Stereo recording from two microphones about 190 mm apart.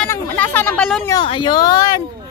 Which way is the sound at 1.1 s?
25° left (ahead or behind).